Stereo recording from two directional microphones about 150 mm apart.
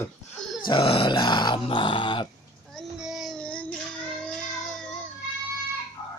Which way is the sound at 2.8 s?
5° right (ahead or behind).